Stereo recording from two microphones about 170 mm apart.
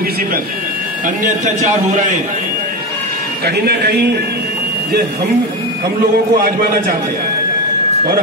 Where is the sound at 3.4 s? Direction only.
70° right (ahead or behind).